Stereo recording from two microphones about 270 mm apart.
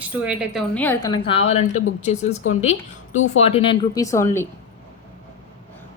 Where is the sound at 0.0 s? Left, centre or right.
Centre.